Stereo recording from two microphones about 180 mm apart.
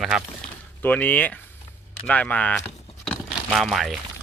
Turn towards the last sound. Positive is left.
turn(degrees=0)  # may be behind; listen again after turning